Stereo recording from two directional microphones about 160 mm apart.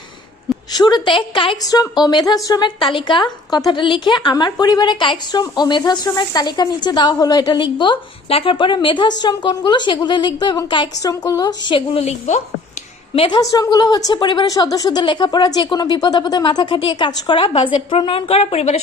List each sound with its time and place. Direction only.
0.7 s a woman's voice: 25° left (ahead or behind)
11.9 s a woman's voice: 45° left (ahead or behind)
13.1 s a woman's voice: 30° left (ahead or behind)